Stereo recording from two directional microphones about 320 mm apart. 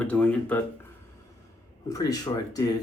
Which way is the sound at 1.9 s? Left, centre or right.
Centre.